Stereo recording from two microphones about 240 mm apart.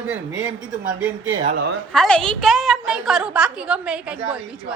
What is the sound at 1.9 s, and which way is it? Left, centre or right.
A woman's voice, centre.